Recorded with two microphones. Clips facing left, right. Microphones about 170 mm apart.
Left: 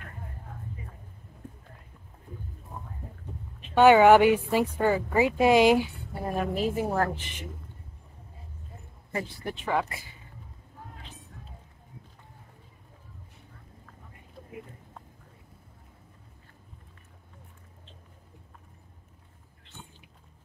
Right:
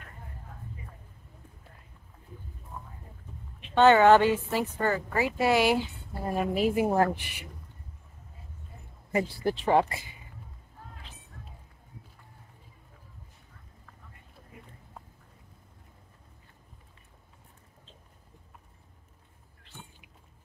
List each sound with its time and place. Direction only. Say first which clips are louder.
3.7 s speech: left 2 dB; 10° left (ahead or behind)
6.2 s a woman's voice: right 1 dB; centre (ahead or behind)
9.4 s speech: right 5 dB; 35° right (ahead or behind)